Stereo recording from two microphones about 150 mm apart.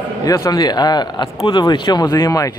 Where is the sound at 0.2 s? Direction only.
25° left (ahead or behind).